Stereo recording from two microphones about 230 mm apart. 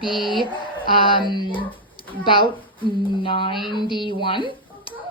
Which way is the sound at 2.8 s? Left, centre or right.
Left.